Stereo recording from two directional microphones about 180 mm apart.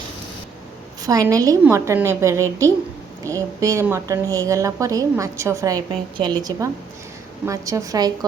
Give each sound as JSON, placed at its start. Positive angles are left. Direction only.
{"t": 1.0, "sound": "a woman's voice", "side_deg": -20}
{"t": 7.4, "sound": "a woman's voice", "side_deg": -15}